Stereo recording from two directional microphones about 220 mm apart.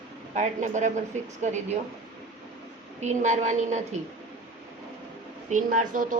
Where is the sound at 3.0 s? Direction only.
30° right (ahead or behind).